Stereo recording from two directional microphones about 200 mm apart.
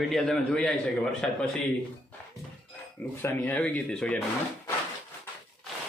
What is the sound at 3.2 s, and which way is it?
Speech, 10° left (ahead or behind).